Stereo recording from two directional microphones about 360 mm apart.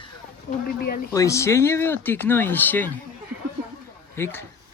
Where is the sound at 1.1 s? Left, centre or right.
Centre.